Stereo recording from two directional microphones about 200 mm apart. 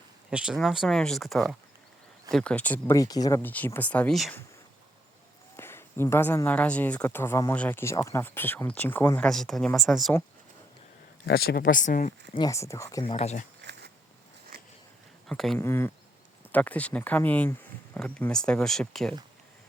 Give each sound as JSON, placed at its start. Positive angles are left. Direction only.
{"t": 0.3, "sound": "speech", "side_deg": -5}
{"t": 5.5, "sound": "speech", "side_deg": 10}
{"t": 11.3, "sound": "speech", "side_deg": 50}
{"t": 12.3, "sound": "speech", "side_deg": 20}
{"t": 13.1, "sound": "speech", "side_deg": 35}
{"t": 13.6, "sound": "a sound", "side_deg": -60}
{"t": 15.3, "sound": "speech", "side_deg": 0}
{"t": 15.5, "sound": "speech", "side_deg": 10}